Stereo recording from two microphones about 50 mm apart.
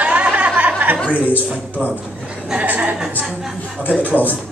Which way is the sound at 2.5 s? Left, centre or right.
Right.